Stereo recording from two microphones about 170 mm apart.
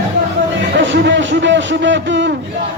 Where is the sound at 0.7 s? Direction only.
90° right.